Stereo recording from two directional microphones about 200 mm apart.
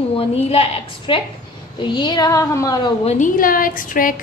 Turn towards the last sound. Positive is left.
turn(degrees=45)  # may be behind; listen again after turning